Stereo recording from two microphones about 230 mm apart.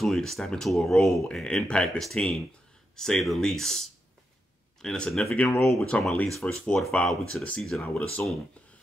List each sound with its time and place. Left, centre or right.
0.0 s speech: centre
4.8 s speech: centre